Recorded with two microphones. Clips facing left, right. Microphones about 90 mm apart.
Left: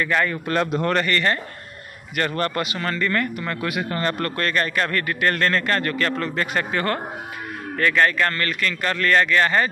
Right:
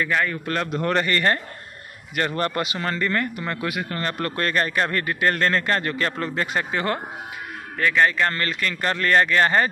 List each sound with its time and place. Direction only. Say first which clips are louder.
0.1 s speech: left 2 dB; 5° right (ahead or behind)
0.5 s a man's voice: left 3 dB; 10° left (ahead or behind)
1.0 s speech: even; 30° right (ahead or behind)
2.1 s speech: even; 20° right (ahead or behind)
3.7 s speech: left 3 dB; centre (ahead or behind)
4.2 s speech: even; 25° right (ahead or behind)